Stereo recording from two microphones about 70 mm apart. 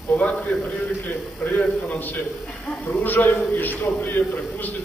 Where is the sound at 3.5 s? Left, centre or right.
Left.